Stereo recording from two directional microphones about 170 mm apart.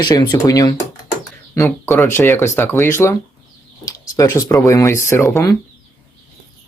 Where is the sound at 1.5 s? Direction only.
15° left (ahead or behind).